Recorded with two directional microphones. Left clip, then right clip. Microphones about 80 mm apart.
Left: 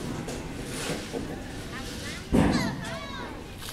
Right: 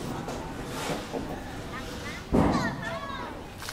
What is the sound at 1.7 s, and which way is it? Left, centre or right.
Vehicle, left.